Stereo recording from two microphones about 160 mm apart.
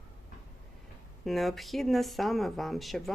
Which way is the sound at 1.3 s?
Centre (ahead or behind).